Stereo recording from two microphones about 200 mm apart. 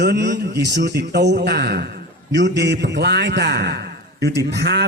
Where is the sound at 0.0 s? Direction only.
55° right (ahead or behind).